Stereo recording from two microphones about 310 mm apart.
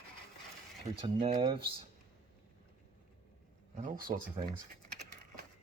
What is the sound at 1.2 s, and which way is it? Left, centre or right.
Speech, centre.